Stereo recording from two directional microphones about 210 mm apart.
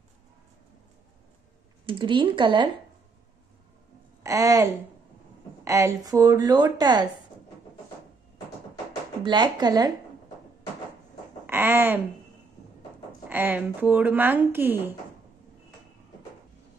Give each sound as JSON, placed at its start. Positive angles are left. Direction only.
{"t": 1.9, "sound": "speech", "side_deg": -25}
{"t": 4.2, "sound": "a woman's voice", "side_deg": -15}
{"t": 9.2, "sound": "speech", "side_deg": -20}
{"t": 11.4, "sound": "speech", "side_deg": -10}
{"t": 13.3, "sound": "speech", "side_deg": -10}